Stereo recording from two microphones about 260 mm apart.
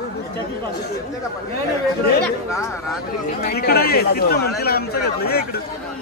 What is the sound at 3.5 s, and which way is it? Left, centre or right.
Speech, left.